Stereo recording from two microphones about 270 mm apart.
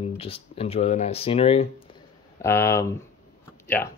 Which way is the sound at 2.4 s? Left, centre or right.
Centre.